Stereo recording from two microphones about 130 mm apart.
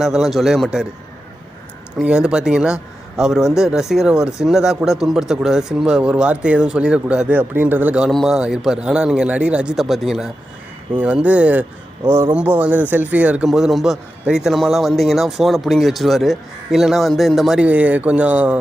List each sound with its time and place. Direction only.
0.0 s a man's voice: centre (ahead or behind)
2.0 s a man's voice: 5° right (ahead or behind)